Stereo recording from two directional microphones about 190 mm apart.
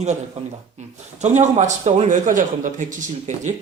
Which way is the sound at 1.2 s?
40° right (ahead or behind).